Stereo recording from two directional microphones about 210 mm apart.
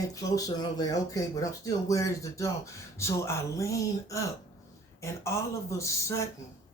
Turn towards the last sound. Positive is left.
turn(degrees=15)  # may be behind; listen again after turning